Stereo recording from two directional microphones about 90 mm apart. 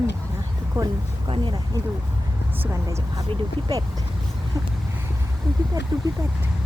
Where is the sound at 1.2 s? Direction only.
75° right (ahead or behind).